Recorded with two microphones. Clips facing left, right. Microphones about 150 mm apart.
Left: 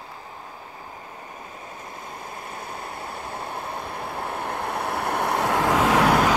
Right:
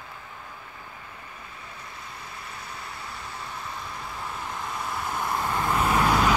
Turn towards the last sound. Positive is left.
turn(degrees=70)  # may be behind; listen again after turning